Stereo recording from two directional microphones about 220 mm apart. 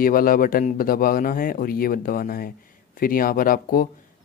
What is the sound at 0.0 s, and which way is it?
A man's voice, 40° left (ahead or behind).